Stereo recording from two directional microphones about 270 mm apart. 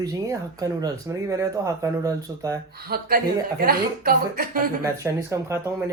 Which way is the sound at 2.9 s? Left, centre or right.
Right.